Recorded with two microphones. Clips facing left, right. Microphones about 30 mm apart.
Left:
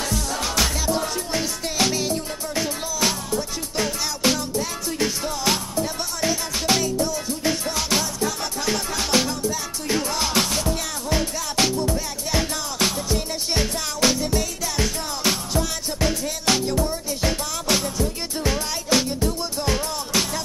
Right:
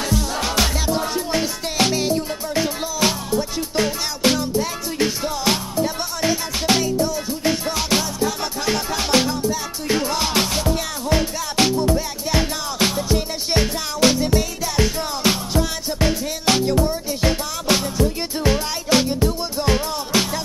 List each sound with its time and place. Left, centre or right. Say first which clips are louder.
0.1 s music: right 3 dB; centre